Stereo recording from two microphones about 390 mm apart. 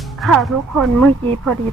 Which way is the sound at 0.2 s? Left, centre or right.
Centre.